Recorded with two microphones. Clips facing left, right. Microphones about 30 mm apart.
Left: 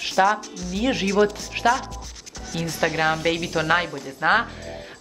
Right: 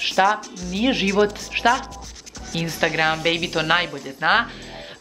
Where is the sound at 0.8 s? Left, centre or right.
Right.